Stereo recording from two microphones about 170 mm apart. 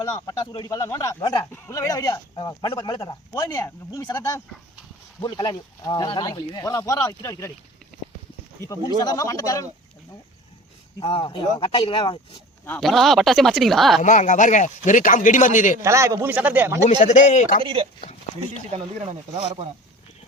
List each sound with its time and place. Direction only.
0.1 s speech: 20° left (ahead or behind)
8.6 s speech: 20° left (ahead or behind)
11.0 s speech: 30° left (ahead or behind)
12.8 s speech: centre (ahead or behind)
14.0 s speech: 45° left (ahead or behind)
15.8 s speech: 15° right (ahead or behind)
17.0 s speech: 45° left (ahead or behind)
17.6 s speech: 30° right (ahead or behind)